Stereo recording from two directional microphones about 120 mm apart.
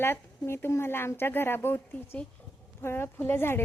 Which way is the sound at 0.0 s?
20° left (ahead or behind).